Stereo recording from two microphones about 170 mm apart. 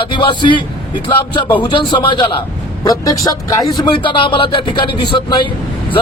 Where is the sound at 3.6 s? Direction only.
Centre (ahead or behind).